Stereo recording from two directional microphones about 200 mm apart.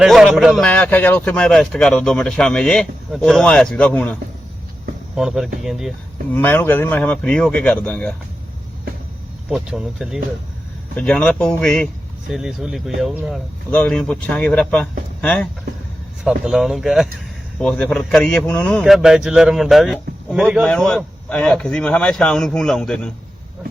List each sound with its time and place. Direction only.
0.0 s speech: centre (ahead or behind)
6.3 s speech: 10° left (ahead or behind)
9.5 s speech: 5° right (ahead or behind)